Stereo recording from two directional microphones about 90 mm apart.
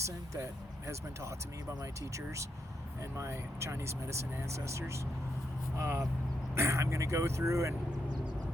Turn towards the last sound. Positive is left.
turn(degrees=-35)  # may be behind; listen again after turning